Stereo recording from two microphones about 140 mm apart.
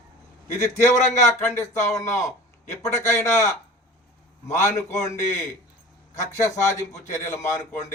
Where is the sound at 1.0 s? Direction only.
55° left (ahead or behind).